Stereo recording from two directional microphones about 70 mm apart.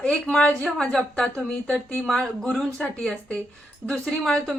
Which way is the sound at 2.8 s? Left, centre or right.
Centre.